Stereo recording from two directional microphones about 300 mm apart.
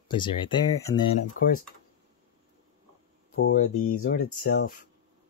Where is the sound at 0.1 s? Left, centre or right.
Centre.